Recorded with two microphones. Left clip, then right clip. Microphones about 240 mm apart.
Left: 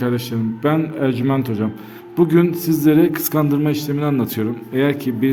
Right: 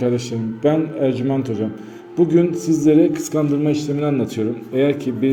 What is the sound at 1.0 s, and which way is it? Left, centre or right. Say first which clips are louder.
A man's voice: even; left.